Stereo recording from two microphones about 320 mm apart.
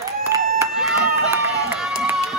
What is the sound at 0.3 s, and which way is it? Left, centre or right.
Applause, centre.